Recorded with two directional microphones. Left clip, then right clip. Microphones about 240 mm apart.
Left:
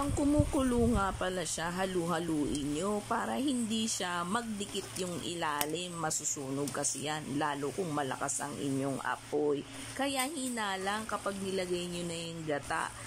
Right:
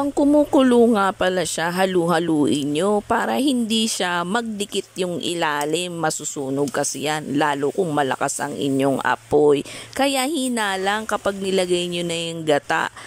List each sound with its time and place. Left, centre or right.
0.2 s speech: right